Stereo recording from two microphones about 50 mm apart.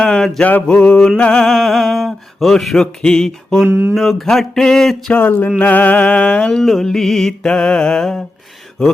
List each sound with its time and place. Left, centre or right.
0.0 s mantra: centre
0.4 s a sound: left
0.9 s music: centre
1.4 s mantra: centre
2.7 s music: centre
3.7 s speech: right
3.9 s music: centre
5.5 s a sound: left
6.6 s music: centre